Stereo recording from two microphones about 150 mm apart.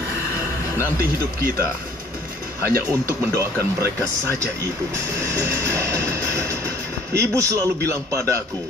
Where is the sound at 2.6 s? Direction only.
15° right (ahead or behind).